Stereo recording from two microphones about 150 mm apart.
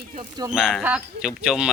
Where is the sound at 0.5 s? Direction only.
Centre (ahead or behind).